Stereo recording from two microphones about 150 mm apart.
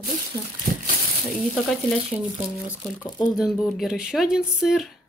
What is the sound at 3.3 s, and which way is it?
Speech, centre (ahead or behind).